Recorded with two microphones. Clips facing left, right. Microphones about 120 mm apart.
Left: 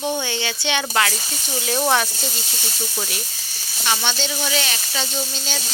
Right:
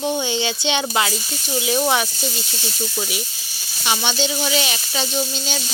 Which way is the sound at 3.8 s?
15° right (ahead or behind).